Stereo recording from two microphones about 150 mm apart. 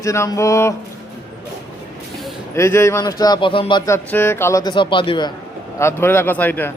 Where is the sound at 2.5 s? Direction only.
20° left (ahead or behind); by 3.8 s 35° left (ahead or behind).